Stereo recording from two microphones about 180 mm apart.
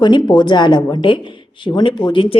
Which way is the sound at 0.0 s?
25° left (ahead or behind).